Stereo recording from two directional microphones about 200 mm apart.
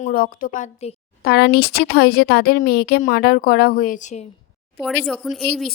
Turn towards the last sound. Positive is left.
turn(degrees=0)  # may be behind; listen again after turning